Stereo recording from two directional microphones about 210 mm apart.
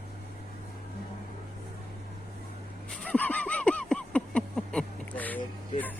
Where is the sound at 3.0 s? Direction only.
5° left (ahead or behind).